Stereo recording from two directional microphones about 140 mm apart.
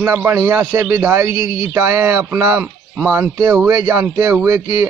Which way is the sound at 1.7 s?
20° right (ahead or behind).